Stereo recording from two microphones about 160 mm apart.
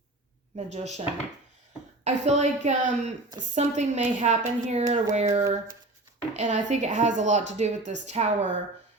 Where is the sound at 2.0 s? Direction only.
45° right (ahead or behind).